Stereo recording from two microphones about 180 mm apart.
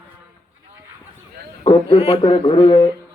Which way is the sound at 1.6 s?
35° left (ahead or behind).